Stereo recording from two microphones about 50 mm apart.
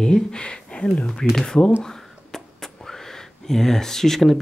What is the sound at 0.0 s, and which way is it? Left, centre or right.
Speech, centre.